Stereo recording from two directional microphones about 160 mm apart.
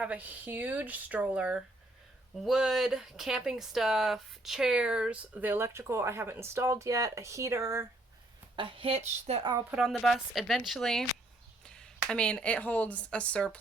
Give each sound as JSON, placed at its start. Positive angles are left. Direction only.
{"t": 0.0, "sound": "speech", "side_deg": -10}
{"t": 8.5, "sound": "a woman's voice", "side_deg": -35}
{"t": 9.6, "sound": "a woman's voice", "side_deg": 0}